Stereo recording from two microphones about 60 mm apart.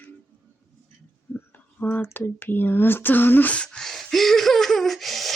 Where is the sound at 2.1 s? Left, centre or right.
Left.